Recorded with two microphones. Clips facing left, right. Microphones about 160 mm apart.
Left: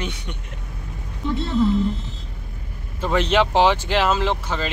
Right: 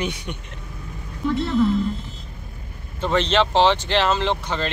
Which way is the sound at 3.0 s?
10° left (ahead or behind).